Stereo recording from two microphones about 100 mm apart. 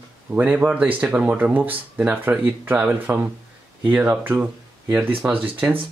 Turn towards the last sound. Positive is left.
turn(degrees=-15)  # may be behind; listen again after turning